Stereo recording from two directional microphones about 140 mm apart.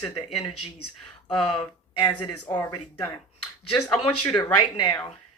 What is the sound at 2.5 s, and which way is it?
Speech, 20° left (ahead or behind).